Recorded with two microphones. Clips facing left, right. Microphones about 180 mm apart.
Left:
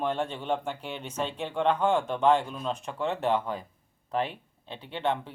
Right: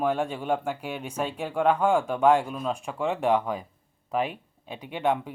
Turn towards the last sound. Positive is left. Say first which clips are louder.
# right 3 dB
turn(degrees=-10)  # may be behind; listen again after turning